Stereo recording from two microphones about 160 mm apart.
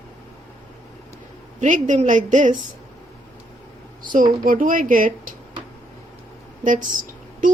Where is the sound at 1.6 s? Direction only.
50° right (ahead or behind).